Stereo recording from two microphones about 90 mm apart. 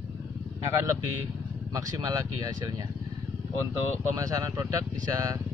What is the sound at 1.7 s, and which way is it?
Speech, 40° right (ahead or behind).